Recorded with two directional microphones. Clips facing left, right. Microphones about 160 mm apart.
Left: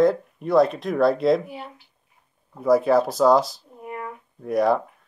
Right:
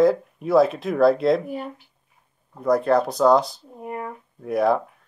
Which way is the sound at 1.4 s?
45° right (ahead or behind).